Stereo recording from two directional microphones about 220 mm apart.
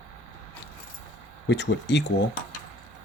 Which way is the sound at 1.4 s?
50° left (ahead or behind).